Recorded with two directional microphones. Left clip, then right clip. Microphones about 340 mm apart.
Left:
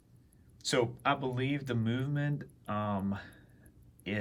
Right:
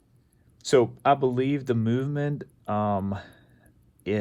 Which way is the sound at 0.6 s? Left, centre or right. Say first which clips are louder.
Right 9 dB; centre.